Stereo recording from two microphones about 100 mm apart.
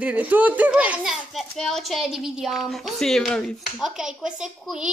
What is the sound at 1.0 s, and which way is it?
Speech, centre (ahead or behind).